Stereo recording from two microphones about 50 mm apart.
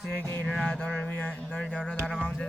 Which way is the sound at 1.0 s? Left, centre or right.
Left.